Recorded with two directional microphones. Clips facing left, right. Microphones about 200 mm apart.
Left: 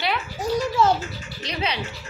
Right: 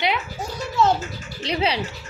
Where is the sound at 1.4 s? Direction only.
30° right (ahead or behind).